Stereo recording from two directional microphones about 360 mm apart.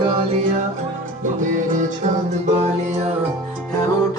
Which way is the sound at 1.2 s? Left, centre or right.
Right.